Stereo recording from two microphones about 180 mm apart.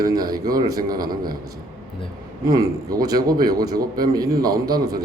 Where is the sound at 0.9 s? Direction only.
55° right (ahead or behind).